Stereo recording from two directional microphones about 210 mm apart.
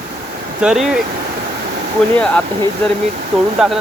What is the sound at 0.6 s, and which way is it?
Speech, 5° right (ahead or behind).